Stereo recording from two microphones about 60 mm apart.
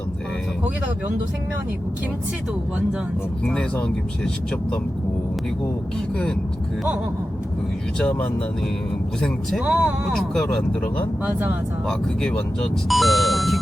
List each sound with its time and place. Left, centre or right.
3.4 s speech: centre
7.9 s speech: centre
9.6 s speech: centre
10.1 s speech: centre
11.2 s speech: right
11.9 s speech: centre
12.9 s speech: centre